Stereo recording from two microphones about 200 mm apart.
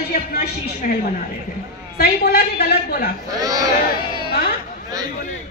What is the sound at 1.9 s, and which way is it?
A woman's voice, 55° left (ahead or behind).